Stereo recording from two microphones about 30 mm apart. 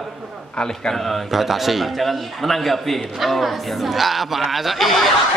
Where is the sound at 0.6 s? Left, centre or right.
Left.